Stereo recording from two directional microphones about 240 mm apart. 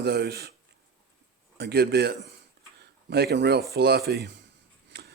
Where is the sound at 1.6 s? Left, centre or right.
Right.